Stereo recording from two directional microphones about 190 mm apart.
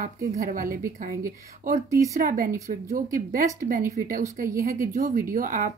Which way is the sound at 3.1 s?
45° right (ahead or behind).